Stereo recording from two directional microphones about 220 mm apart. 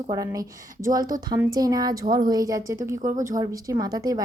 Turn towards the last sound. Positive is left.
turn(degrees=-15)  # may be behind; listen again after turning